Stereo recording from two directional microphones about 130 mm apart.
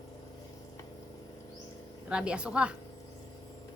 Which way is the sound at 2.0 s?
10° right (ahead or behind).